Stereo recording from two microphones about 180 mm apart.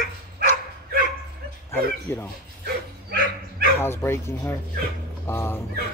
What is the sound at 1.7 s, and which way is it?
Speech, 15° left (ahead or behind).